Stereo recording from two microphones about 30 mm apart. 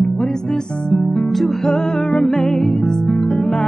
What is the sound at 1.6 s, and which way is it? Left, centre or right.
Music, centre.